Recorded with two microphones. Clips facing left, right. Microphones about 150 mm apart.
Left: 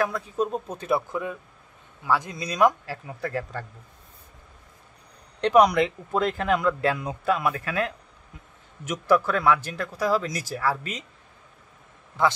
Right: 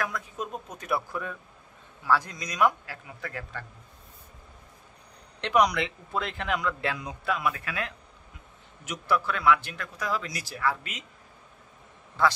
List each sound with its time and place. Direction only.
0.0 s speech: 30° left (ahead or behind)
2.4 s speech: 30° left (ahead or behind)
5.6 s a man's voice: 45° left (ahead or behind)
12.2 s a man's voice: 15° left (ahead or behind)